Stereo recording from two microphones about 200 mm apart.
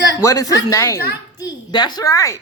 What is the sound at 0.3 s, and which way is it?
A woman's voice, 15° left (ahead or behind).